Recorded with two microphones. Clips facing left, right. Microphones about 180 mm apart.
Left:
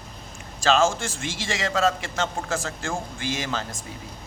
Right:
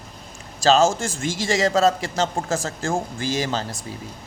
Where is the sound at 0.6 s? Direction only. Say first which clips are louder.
Right 4 dB; 40° right (ahead or behind).